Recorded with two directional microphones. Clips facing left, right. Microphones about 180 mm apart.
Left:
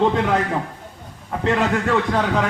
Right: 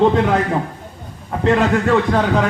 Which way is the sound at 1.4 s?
40° right (ahead or behind).